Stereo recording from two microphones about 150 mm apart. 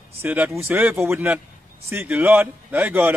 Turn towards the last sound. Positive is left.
turn(degrees=-15)  # may be behind; listen again after turning